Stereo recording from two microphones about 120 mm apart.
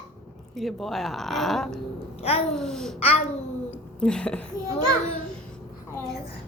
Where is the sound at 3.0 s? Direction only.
55° left (ahead or behind).